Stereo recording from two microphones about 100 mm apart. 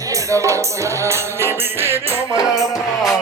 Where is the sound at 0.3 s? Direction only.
30° right (ahead or behind).